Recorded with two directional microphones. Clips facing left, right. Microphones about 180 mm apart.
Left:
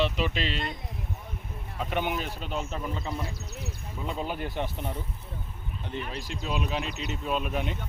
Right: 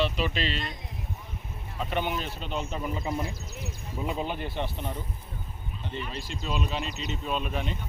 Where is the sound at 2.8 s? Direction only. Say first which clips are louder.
Right 2 dB; 10° right (ahead or behind).